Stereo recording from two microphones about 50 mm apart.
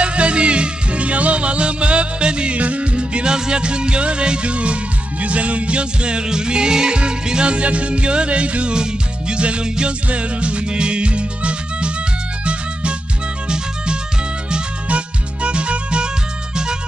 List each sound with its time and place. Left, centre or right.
0.0 s music: right
14.5 s music: right